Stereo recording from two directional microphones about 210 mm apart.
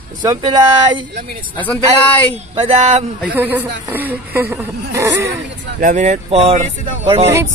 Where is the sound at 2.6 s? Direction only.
30° right (ahead or behind).